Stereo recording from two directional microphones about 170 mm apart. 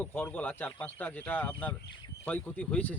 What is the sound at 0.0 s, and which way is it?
Speech, 10° left (ahead or behind).